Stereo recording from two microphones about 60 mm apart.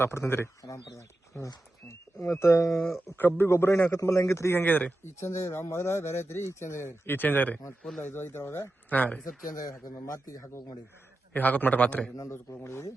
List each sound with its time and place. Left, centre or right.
0.0 s speech: left
0.6 s speech: left
3.2 s a man's voice: left
3.9 s speech: left
4.5 s a man's voice: left
5.2 s speech: left
8.0 s speech: left
8.9 s a man's voice: left
9.9 s speech: left
11.3 s a man's voice: left
12.3 s speech: left